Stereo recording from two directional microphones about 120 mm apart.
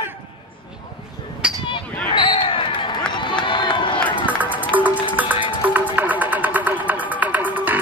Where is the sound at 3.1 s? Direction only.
40° left (ahead or behind).